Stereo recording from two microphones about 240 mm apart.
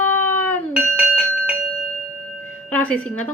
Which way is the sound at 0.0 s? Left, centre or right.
Right.